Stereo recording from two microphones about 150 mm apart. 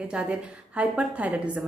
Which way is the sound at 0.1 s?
5° right (ahead or behind).